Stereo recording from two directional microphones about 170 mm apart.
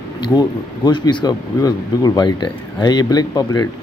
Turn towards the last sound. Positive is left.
turn(degrees=20)  # may be behind; listen again after turning